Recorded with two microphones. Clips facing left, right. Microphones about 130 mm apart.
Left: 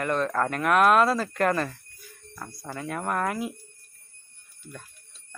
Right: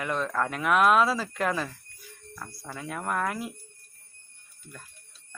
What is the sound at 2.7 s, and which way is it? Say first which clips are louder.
Speech: left 2 dB; centre (ahead or behind).